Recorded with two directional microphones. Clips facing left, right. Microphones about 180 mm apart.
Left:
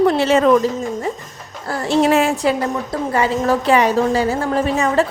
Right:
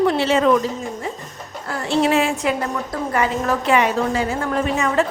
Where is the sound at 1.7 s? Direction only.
40° left (ahead or behind).